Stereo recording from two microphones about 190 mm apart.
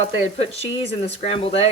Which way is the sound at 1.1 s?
30° left (ahead or behind).